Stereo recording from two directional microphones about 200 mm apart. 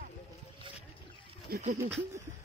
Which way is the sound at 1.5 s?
35° right (ahead or behind).